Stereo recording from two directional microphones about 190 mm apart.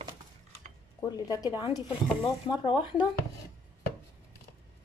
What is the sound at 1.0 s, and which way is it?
Speech, 20° left (ahead or behind).